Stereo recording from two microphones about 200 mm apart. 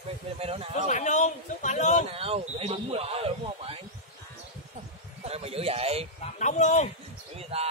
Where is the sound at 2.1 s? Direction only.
30° right (ahead or behind).